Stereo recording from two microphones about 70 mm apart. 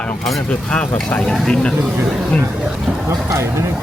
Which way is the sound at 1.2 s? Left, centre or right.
Centre.